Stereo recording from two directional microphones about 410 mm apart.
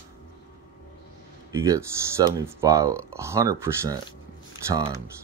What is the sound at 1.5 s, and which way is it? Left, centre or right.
Speech, centre.